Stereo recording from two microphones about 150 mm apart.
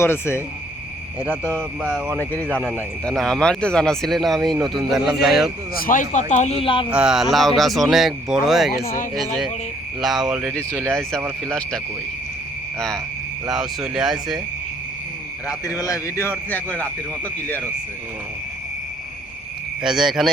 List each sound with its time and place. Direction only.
0.0 s speech: 15° left (ahead or behind)
1.8 s speech: 5° right (ahead or behind)
2.1 s speech: 10° left (ahead or behind)
5.7 s speech: 70° left (ahead or behind); by 6.8 s 40° left (ahead or behind)
6.9 s speech: 5° right (ahead or behind)
10.0 s speech: 5° right (ahead or behind)
10.5 s speech: 10° left (ahead or behind)
13.5 s speech: 5° right (ahead or behind)
15.4 s speech: 20° left (ahead or behind)
19.8 s speech: 5° right (ahead or behind)